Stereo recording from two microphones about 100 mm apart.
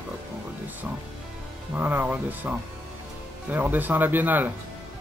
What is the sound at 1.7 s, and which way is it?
Speech, 20° right (ahead or behind).